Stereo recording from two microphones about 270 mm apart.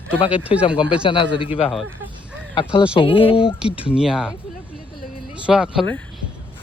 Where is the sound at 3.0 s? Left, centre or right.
Centre.